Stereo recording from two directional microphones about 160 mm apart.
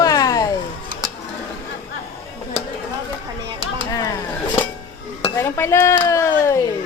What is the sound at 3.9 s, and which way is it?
Speech, 20° left (ahead or behind).